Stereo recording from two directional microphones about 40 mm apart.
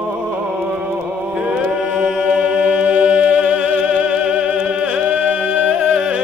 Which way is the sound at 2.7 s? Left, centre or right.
Right.